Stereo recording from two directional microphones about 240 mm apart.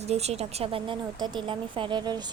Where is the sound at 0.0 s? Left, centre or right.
Right.